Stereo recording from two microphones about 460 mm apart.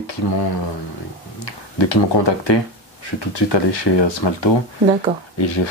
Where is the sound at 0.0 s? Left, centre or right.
Left.